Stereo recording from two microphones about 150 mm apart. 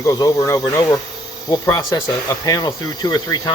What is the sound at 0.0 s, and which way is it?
Speech, 20° left (ahead or behind).